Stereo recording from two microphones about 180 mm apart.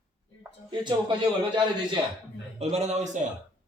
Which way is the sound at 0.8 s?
25° right (ahead or behind).